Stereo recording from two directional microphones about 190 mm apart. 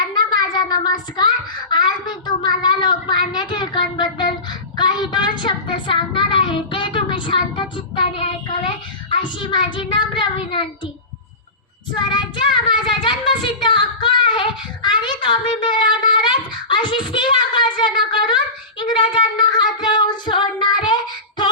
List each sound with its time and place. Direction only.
0.0 s a sound: 20° left (ahead or behind)
1.7 s child singing: 25° left (ahead or behind)
11.9 s child singing: 25° left (ahead or behind)